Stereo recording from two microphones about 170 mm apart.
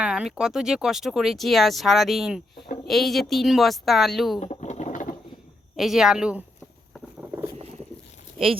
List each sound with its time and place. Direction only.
0.0 s speech: 5° right (ahead or behind)
4.4 s bird: 40° left (ahead or behind)
5.7 s speech: centre (ahead or behind)
7.2 s boat: 15° right (ahead or behind)